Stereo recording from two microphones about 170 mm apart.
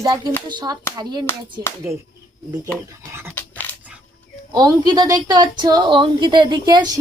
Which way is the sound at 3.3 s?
10° left (ahead or behind).